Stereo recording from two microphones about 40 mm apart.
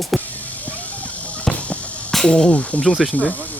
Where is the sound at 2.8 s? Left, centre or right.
Left.